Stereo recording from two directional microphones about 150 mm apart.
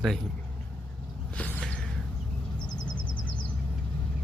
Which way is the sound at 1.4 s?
5° left (ahead or behind).